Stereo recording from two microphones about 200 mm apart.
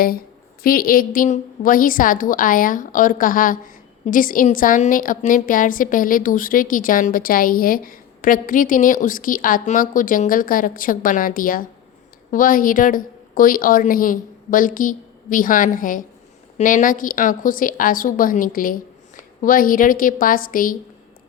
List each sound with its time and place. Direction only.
0.6 s a woman's voice: 45° left (ahead or behind)